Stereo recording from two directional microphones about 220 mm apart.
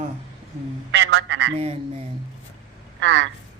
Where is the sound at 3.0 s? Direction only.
55° right (ahead or behind).